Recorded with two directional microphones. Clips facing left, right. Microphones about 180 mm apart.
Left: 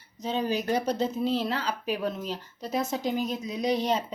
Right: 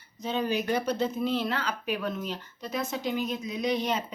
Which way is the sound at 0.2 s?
35° left (ahead or behind).